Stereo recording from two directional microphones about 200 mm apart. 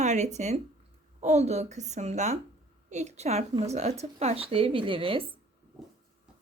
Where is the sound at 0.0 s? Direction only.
35° right (ahead or behind).